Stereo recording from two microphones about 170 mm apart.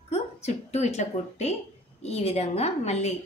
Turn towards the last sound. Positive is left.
turn(degrees=40)  # may be behind; listen again after turning